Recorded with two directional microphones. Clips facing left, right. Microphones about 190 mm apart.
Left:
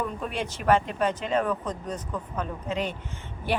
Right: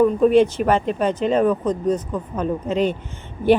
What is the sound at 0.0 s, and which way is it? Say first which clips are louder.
A woman's voice: right 17 dB; 25° right (ahead or behind).